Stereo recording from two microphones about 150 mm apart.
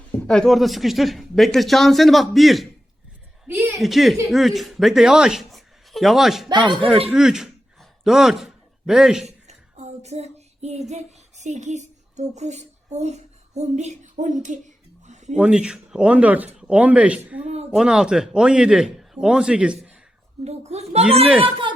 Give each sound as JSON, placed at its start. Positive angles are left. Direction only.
{"t": 0.1, "sound": "a man's voice", "side_deg": 10}
{"t": 3.4, "sound": "speech", "side_deg": -15}
{"t": 3.8, "sound": "speech", "side_deg": 0}
{"t": 6.5, "sound": "speech", "side_deg": -30}
{"t": 7.1, "sound": "a sound", "side_deg": -5}
{"t": 9.2, "sound": "child singing", "side_deg": -45}
{"t": 15.4, "sound": "speech", "side_deg": -5}
{"t": 17.4, "sound": "a child's voice", "side_deg": -45}
{"t": 17.7, "sound": "a man's voice", "side_deg": -5}
{"t": 20.4, "sound": "a child's voice", "side_deg": -45}